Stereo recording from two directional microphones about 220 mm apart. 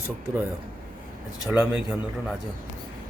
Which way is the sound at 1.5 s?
5° right (ahead or behind).